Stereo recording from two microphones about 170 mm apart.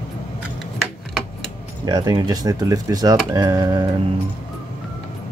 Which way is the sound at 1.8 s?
25° right (ahead or behind).